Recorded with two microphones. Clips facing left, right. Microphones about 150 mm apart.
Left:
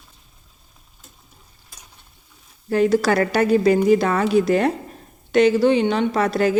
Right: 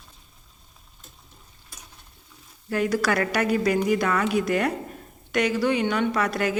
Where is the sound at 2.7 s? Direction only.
30° left (ahead or behind).